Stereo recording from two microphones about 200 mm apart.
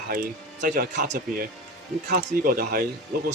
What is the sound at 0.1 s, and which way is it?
A man's voice, 45° right (ahead or behind).